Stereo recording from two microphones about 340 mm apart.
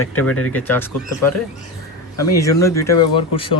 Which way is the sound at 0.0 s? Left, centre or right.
Left.